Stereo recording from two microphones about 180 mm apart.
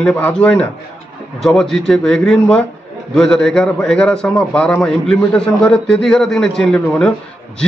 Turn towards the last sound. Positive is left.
turn(degrees=5)  # may be behind; listen again after turning